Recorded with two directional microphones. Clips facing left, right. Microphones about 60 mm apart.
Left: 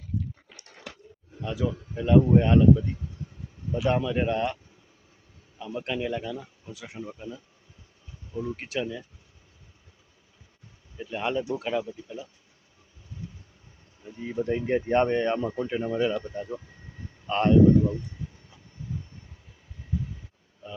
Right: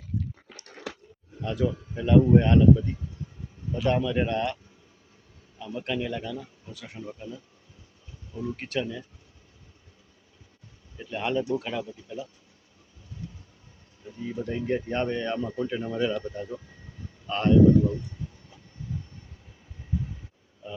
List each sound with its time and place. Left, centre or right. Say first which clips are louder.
1.4 s speech: right 2 dB; centre
5.5 s speech: even; centre
10.9 s speech: right 1 dB; centre
14.2 s a man's voice: left 3 dB; left
18.8 s vehicle: even; centre